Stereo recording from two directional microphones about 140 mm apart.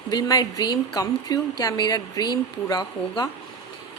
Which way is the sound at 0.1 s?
25° left (ahead or behind).